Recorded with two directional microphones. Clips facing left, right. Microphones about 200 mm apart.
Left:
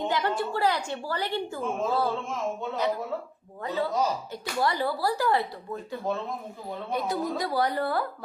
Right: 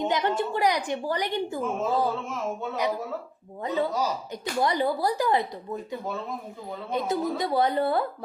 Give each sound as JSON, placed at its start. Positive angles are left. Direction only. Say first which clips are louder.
{"t": 0.0, "sound": "a woman's voice", "louder": "right 2 dB", "side_deg": -20}
{"t": 3.6, "sound": "speech", "louder": "right 1 dB", "side_deg": -20}
{"t": 6.9, "sound": "speech", "louder": "right 2 dB", "side_deg": -20}